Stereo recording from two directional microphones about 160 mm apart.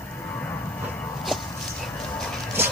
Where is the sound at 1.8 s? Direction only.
5° left (ahead or behind).